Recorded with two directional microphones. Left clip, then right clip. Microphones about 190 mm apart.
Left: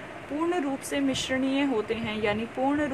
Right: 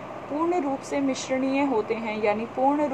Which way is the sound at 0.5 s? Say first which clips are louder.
Right 2 dB; 35° left (ahead or behind).